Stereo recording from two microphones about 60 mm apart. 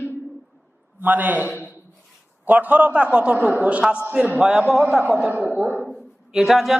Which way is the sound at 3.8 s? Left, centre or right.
Centre.